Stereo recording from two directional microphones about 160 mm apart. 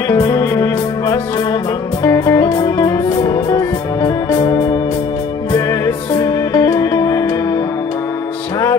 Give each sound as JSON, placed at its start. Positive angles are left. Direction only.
{"t": 0.1, "sound": "music", "side_deg": 20}